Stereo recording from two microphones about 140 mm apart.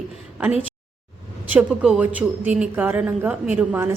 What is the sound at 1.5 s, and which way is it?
Speech, 10° right (ahead or behind).